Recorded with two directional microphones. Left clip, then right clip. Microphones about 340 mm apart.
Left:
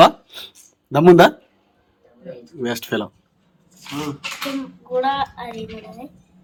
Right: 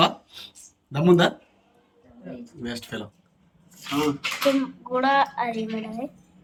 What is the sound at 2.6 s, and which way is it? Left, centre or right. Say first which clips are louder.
Speech: left 11 dB; centre.